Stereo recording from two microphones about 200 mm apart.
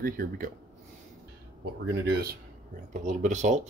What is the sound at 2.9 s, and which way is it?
Speech, 35° right (ahead or behind).